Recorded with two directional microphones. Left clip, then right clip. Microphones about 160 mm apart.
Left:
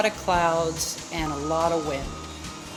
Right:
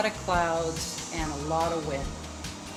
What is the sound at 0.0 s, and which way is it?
Speech, 60° left (ahead or behind).